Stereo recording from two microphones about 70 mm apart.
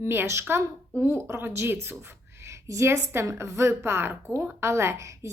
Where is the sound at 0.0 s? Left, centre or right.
Right.